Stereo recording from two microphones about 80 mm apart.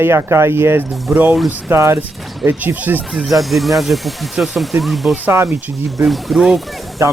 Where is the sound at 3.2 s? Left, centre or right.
Centre.